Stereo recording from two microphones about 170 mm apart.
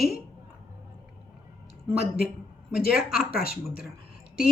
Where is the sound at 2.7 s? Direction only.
60° left (ahead or behind).